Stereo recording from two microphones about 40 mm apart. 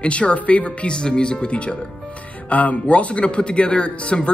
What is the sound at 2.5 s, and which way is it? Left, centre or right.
Speech, left.